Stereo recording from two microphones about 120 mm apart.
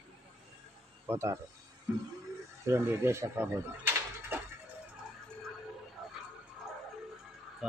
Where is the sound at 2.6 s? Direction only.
20° right (ahead or behind).